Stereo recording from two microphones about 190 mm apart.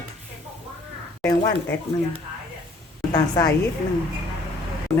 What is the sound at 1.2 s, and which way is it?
Speech, 15° left (ahead or behind).